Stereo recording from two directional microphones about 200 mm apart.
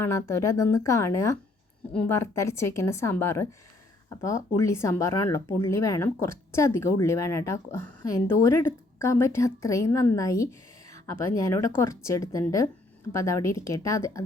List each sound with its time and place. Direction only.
0.0 s speech: 15° left (ahead or behind)